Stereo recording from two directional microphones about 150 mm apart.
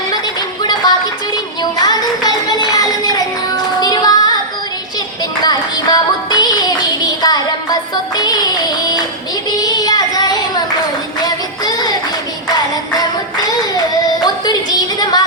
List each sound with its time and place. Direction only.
0.1 s music: 25° left (ahead or behind)
5.4 s music: 25° left (ahead or behind)
9.5 s child singing: 25° left (ahead or behind)
12.5 s music: 25° left (ahead or behind)
14.3 s a sound: 25° left (ahead or behind)